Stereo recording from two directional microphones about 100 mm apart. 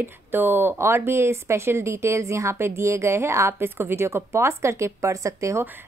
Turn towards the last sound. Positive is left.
turn(degrees=-30)  # may be behind; listen again after turning